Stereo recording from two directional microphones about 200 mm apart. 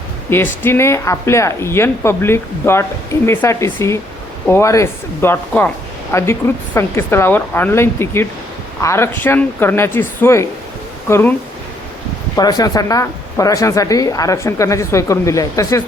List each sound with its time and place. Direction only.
0.3 s speech: 10° left (ahead or behind)
12.4 s speech: 20° left (ahead or behind)